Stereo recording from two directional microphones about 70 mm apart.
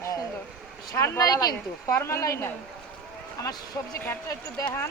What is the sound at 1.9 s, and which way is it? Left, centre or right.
Speech, left.